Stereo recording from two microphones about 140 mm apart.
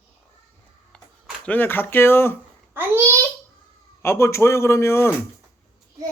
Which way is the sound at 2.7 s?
15° right (ahead or behind).